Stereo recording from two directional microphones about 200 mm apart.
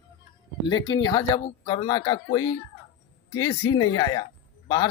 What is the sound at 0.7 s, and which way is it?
Speech, 20° left (ahead or behind).